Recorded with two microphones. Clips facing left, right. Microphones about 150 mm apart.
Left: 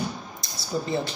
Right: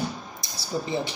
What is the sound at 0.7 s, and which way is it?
Speech, 15° right (ahead or behind).